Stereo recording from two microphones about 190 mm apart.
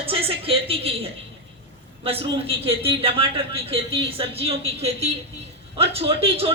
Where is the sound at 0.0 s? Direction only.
30° right (ahead or behind).